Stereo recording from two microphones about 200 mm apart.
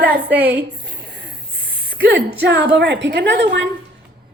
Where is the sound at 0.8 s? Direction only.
55° right (ahead or behind).